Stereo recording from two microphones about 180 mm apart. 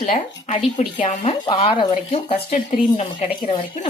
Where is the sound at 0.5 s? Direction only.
30° left (ahead or behind).